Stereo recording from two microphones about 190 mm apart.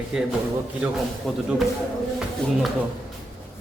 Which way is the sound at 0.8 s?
5° right (ahead or behind).